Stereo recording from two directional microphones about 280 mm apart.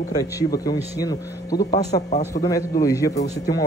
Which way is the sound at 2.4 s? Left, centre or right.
Left.